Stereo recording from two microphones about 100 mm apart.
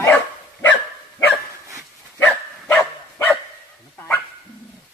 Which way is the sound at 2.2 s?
20° left (ahead or behind).